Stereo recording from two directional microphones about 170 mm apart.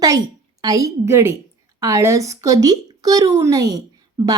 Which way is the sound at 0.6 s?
20° right (ahead or behind).